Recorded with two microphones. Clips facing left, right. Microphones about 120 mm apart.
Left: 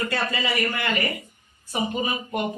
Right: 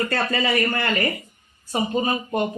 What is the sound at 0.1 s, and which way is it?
A man's voice, 45° right (ahead or behind).